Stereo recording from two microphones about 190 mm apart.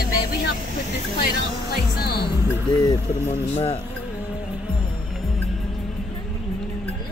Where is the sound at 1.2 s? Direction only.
55° left (ahead or behind).